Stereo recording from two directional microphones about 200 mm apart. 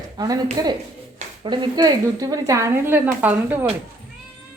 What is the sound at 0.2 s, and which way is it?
A woman's voice, 20° right (ahead or behind).